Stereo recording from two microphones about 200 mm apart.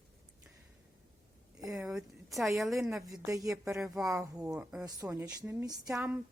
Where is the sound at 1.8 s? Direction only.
Centre (ahead or behind).